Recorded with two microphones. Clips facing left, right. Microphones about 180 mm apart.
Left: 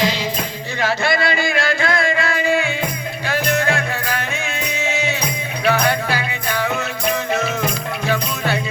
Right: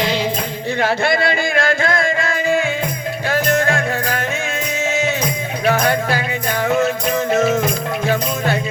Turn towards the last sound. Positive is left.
turn(degrees=-45)  # may be behind; listen again after turning